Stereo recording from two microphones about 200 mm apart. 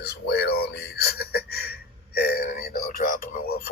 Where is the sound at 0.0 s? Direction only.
55° left (ahead or behind).